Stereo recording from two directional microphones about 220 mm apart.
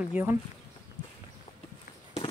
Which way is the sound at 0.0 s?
5° right (ahead or behind).